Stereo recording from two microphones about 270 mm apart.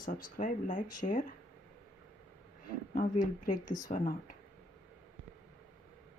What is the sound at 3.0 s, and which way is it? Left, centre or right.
Speech, left.